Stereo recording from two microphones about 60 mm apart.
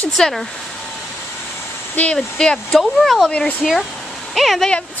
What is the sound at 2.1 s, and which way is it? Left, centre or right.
Speech, centre.